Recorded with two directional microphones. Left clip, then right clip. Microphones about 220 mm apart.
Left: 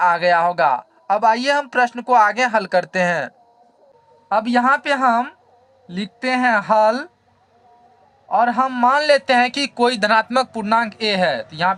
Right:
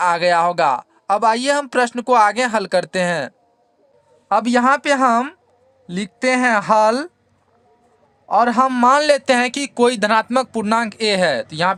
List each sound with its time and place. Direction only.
0.0 s speech: 50° right (ahead or behind)
4.3 s a man's voice: 60° right (ahead or behind)
8.3 s a man's voice: 65° right (ahead or behind)